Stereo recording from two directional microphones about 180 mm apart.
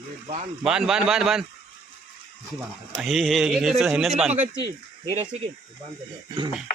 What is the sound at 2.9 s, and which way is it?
A man's voice, centre (ahead or behind).